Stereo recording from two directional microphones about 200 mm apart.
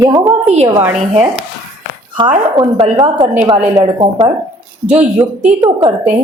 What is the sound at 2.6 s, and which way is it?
Speech, 25° right (ahead or behind).